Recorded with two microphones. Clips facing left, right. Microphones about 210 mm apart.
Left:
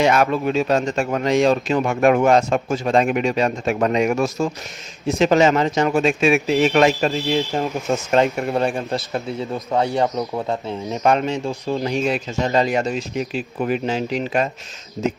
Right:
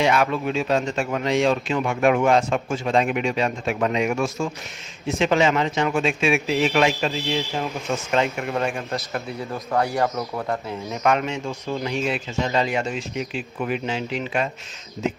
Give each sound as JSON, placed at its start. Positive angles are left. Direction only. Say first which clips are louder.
{"t": 0.0, "sound": "speech", "louder": "left 3 dB", "side_deg": 45}
{"t": 10.9, "sound": "speech", "louder": "left 3 dB", "side_deg": 35}